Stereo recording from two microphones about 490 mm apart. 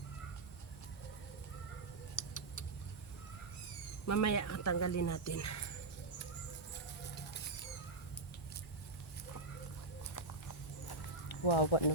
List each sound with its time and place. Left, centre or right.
2.1 s tick: left
4.0 s speech: left
11.3 s speech: left